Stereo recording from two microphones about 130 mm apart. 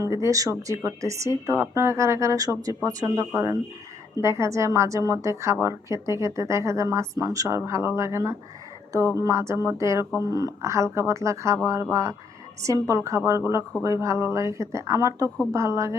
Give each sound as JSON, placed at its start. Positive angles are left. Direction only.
{"t": 0.0, "sound": "a woman's voice", "side_deg": -25}